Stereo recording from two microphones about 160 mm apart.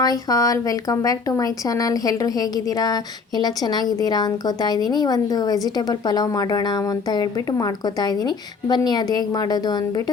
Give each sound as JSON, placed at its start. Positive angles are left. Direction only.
{"t": 0.0, "sound": "a woman's voice", "side_deg": 25}